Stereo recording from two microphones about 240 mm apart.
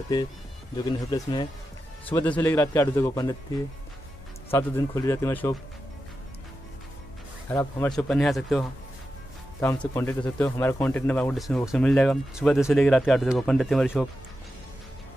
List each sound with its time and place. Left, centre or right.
0.8 s speech: centre
2.2 s speech: centre
4.5 s speech: centre
7.4 s speech: centre